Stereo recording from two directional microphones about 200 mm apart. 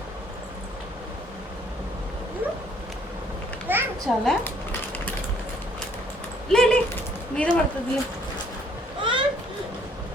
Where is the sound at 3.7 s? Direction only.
10° right (ahead or behind).